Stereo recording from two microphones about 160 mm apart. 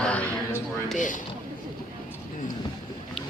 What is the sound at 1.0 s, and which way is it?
Speech, 55° left (ahead or behind).